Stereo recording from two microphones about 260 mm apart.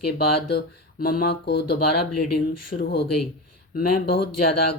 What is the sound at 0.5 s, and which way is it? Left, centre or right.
Mantra, left.